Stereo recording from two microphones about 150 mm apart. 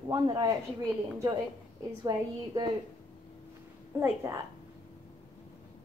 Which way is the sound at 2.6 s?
20° right (ahead or behind).